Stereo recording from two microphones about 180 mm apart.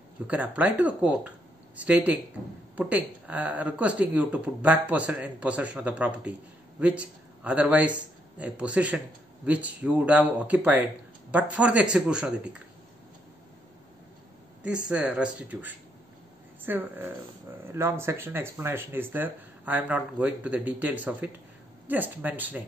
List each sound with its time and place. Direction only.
0.3 s a man's voice: 10° right (ahead or behind)
14.9 s speech: 5° right (ahead or behind)